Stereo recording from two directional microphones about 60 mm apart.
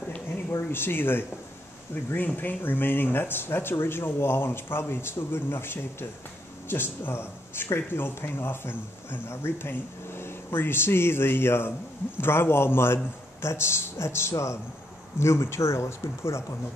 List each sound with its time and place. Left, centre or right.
0.5 s a man's voice: left